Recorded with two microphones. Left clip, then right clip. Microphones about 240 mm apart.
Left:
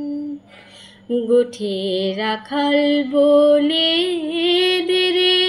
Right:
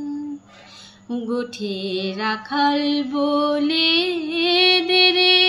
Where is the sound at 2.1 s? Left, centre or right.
Centre.